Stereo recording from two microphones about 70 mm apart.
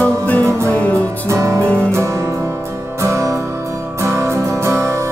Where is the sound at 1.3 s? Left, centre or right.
Right.